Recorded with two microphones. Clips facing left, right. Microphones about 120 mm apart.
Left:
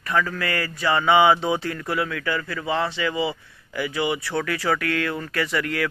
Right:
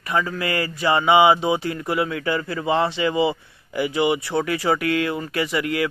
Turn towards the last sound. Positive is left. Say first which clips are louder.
# right 2 dB
turn(degrees=-15)  # may be behind; listen again after turning